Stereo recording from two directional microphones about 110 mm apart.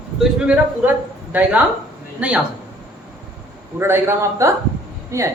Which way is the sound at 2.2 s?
10° right (ahead or behind).